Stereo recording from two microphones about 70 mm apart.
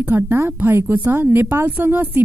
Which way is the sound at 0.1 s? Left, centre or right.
Right.